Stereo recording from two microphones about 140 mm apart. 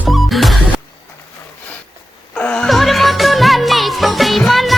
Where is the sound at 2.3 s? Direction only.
5° left (ahead or behind).